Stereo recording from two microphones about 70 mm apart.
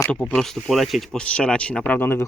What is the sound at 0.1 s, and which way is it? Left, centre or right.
Speech, centre.